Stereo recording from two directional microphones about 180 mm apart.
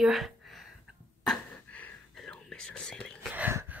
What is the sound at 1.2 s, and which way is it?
Whispering, 5° left (ahead or behind).